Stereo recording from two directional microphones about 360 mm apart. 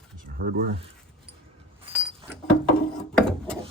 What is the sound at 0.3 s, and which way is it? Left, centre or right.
Speech, right.